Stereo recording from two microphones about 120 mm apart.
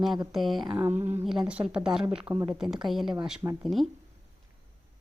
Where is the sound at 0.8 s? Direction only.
15° right (ahead or behind).